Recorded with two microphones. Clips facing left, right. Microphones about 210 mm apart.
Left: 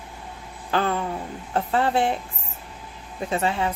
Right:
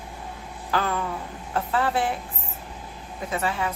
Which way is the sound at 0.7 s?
30° left (ahead or behind).